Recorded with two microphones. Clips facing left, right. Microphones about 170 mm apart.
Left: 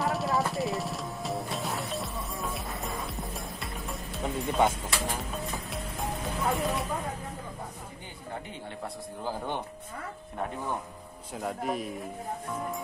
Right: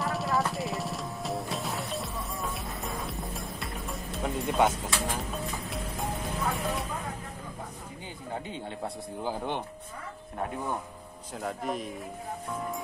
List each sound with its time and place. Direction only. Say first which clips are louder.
0.0 s music: left 1 dB; centre (ahead or behind)
8.8 s a man's voice: right 1 dB; 15° right (ahead or behind)
11.3 s speech: left 1 dB; centre (ahead or behind)